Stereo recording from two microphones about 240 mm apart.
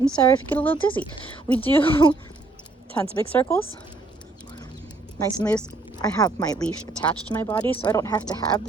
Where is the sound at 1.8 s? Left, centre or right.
Left.